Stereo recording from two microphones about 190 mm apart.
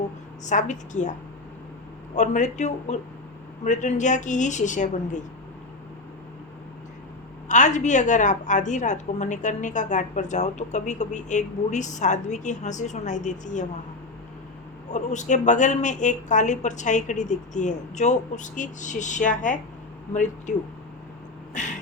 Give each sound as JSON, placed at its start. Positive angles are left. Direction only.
{"t": 0.4, "sound": "a woman's voice", "side_deg": 40}
{"t": 2.1, "sound": "a woman's voice", "side_deg": 40}
{"t": 7.4, "sound": "a woman's voice", "side_deg": 40}
{"t": 14.8, "sound": "a woman's voice", "side_deg": 40}